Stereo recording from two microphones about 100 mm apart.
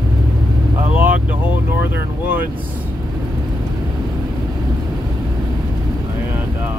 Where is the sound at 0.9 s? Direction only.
15° right (ahead or behind).